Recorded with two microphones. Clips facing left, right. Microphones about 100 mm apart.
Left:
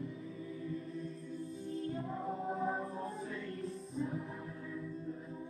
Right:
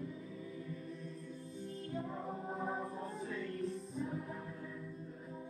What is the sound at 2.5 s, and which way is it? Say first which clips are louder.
Music: left 3 dB; centre (ahead or behind).